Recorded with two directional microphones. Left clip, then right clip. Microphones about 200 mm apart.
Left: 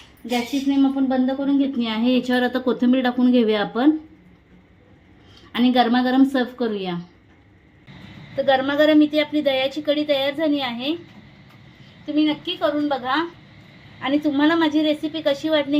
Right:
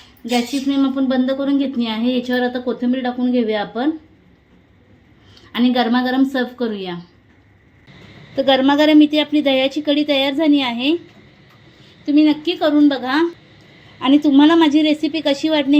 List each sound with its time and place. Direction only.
0.3 s a woman's voice: 20° right (ahead or behind)
1.8 s speech: centre (ahead or behind)
5.5 s a woman's voice: 5° right (ahead or behind)
8.4 s a woman's voice: 30° right (ahead or behind)
12.0 s a woman's voice: 40° right (ahead or behind)
14.0 s a woman's voice: 30° right (ahead or behind)